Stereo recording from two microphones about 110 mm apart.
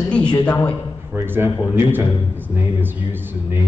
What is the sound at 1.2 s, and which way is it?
A man's voice, 20° right (ahead or behind).